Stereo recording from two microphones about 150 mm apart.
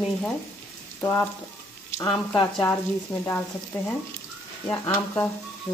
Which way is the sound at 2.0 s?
5° left (ahead or behind).